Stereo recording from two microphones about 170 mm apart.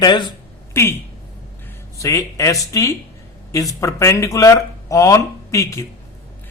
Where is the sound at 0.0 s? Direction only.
25° left (ahead or behind).